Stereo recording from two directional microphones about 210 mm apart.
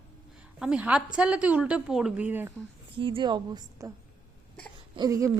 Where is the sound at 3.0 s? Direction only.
25° right (ahead or behind).